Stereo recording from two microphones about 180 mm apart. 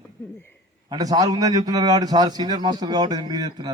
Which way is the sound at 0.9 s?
20° right (ahead or behind).